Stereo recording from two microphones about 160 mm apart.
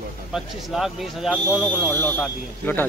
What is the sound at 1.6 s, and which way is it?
Speech, 15° left (ahead or behind).